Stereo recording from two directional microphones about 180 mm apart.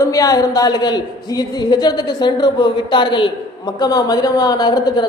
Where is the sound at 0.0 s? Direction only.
20° left (ahead or behind).